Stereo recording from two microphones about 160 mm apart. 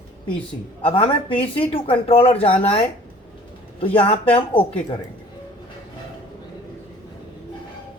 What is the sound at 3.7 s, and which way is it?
Speech, 35° left (ahead or behind).